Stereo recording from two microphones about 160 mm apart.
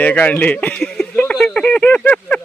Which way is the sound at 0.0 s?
10° left (ahead or behind).